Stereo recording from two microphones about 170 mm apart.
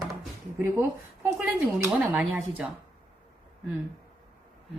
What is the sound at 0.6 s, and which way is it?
Speech, 15° right (ahead or behind).